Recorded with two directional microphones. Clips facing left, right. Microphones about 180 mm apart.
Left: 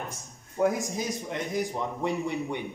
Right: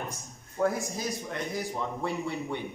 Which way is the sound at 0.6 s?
15° left (ahead or behind).